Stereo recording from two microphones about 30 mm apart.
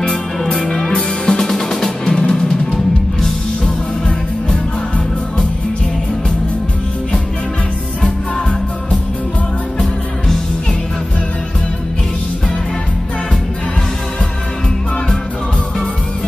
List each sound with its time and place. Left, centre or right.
0.7 s music: centre
1.5 s music: centre
2.0 s music: left